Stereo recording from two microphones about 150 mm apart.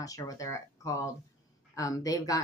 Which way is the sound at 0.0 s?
25° left (ahead or behind).